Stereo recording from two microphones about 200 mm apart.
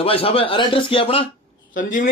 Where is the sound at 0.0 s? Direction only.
30° left (ahead or behind).